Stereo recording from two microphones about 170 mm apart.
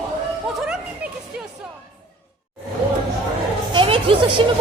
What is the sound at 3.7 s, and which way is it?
Music, 30° right (ahead or behind).